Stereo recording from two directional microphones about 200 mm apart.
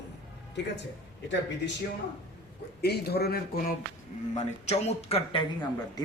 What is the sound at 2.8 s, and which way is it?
Speech, 55° left (ahead or behind).